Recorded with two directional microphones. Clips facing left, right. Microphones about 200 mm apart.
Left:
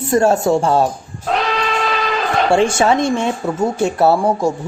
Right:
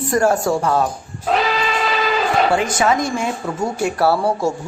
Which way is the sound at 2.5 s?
25° left (ahead or behind).